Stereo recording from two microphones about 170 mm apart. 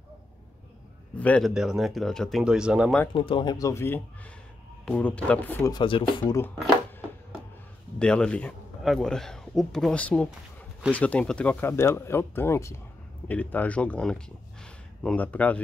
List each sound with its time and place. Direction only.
1.1 s speech: 10° left (ahead or behind)
1.5 s a man's voice: 5° right (ahead or behind)
3.2 s speech: 30° left (ahead or behind); by 5.7 s 10° left (ahead or behind)
5.7 s speech: 30° left (ahead or behind)
8.0 s a man's voice: 5° left (ahead or behind)